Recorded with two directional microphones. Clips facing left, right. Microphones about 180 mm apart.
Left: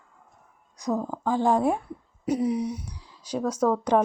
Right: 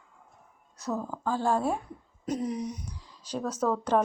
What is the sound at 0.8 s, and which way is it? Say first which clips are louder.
Speech: left 5 dB; 15° left (ahead or behind).